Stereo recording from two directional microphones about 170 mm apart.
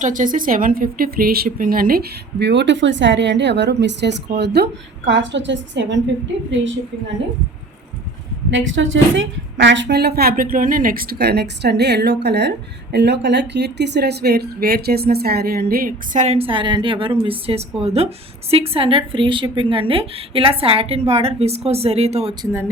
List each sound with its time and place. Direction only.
0.0 s speech: 50° right (ahead or behind); by 6.0 s 90° right
8.4 s a woman's voice: 90° right; by 16.2 s 60° right (ahead or behind)
16.2 s a woman's voice: 35° right (ahead or behind)